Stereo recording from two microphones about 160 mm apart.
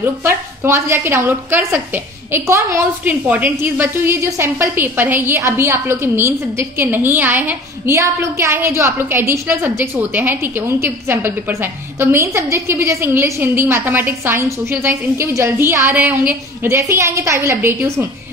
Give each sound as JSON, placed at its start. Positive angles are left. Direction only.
{"t": 0.0, "sound": "a woman's voice", "side_deg": -15}